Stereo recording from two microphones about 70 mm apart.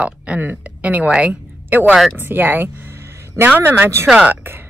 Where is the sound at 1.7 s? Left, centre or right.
Right.